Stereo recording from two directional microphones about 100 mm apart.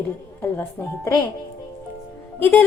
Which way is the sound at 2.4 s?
20° left (ahead or behind).